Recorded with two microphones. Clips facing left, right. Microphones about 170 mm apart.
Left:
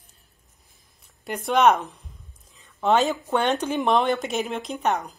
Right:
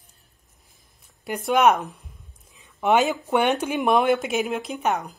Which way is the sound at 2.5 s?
15° right (ahead or behind).